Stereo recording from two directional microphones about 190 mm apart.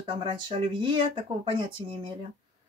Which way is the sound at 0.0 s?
25° right (ahead or behind).